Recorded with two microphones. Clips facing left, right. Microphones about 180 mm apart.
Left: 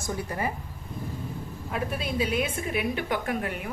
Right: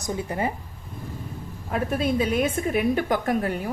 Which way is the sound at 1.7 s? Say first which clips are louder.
Right 6 dB; 45° right (ahead or behind).